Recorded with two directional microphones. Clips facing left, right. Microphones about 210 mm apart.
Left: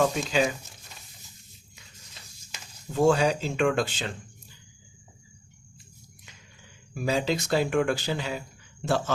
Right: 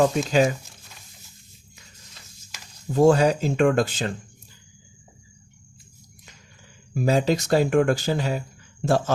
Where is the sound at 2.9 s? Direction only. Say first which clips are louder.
Right 5 dB; 40° right (ahead or behind).